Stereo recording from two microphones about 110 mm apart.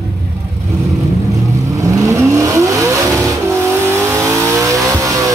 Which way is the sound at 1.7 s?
30° right (ahead or behind).